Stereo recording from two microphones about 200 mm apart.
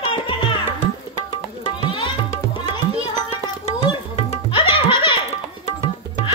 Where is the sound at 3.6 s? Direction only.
25° left (ahead or behind).